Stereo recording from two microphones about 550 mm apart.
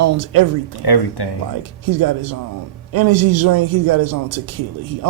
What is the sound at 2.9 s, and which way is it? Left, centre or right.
A man's voice, right.